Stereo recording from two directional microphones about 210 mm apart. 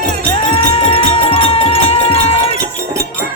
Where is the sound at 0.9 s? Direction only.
30° left (ahead or behind).